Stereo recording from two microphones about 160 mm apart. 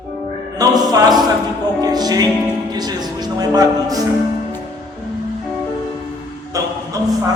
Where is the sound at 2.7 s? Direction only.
25° right (ahead or behind).